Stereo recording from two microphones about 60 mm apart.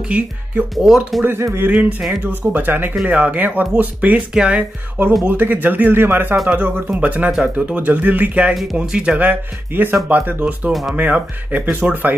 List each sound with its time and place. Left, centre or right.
0.1 s speech: centre
0.8 s speech: centre
1.4 s speech: right
1.7 s speech: right
4.3 s speech: centre
4.6 s speech: right
6.5 s speech: right
9.2 s speech: right
10.7 s speech: centre
11.0 s speech: right